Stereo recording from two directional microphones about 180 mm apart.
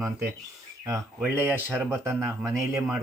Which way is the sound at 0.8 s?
15° right (ahead or behind).